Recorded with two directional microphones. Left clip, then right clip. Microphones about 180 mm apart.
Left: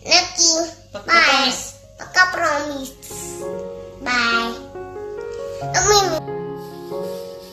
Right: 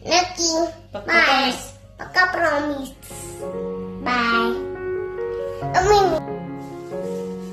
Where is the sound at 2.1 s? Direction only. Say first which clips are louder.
Left 2 dB; centre (ahead or behind).